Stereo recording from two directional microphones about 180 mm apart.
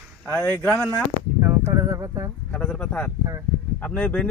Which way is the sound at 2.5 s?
5° left (ahead or behind).